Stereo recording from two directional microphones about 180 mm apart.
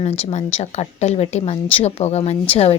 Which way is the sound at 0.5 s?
35° left (ahead or behind).